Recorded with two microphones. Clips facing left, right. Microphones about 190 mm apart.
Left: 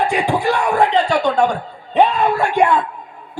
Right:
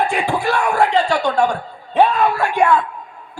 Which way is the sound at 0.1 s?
15° left (ahead or behind).